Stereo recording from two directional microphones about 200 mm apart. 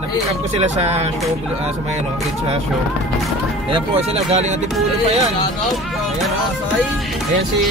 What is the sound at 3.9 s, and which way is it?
Speech, 30° right (ahead or behind).